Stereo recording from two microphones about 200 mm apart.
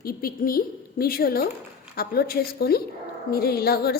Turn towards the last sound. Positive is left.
turn(degrees=50)  # may be behind; listen again after turning